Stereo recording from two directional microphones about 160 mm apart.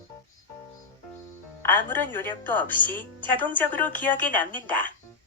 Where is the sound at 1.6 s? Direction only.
10° left (ahead or behind).